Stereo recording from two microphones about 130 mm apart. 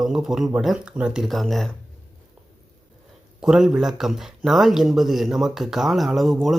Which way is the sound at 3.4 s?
5° right (ahead or behind).